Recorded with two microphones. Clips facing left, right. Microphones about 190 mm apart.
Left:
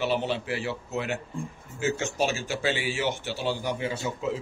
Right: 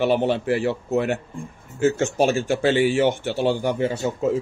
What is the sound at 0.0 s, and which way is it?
A man's voice, 55° right (ahead or behind).